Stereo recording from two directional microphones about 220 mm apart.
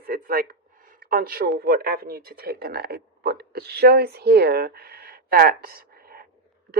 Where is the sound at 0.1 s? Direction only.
40° right (ahead or behind).